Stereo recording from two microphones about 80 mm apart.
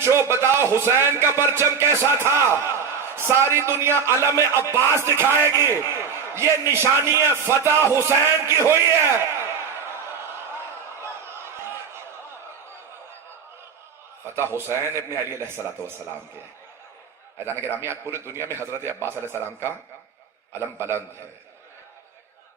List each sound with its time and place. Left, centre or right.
0.0 s speech: right
8.4 s a sound: right
14.3 s speech: right
17.3 s speech: right
20.5 s speech: right